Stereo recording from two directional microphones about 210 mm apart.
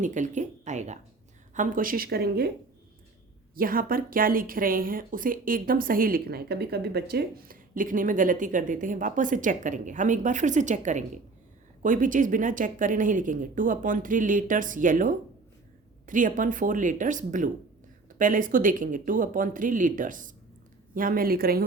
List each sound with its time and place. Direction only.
0.0 s speech: 35° right (ahead or behind)
3.5 s a woman's voice: 45° right (ahead or behind)